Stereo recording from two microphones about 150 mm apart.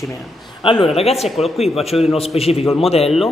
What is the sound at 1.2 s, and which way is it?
Speech, centre (ahead or behind).